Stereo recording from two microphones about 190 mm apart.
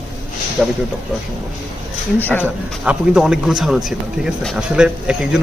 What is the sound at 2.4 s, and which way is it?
A man's voice, 5° right (ahead or behind).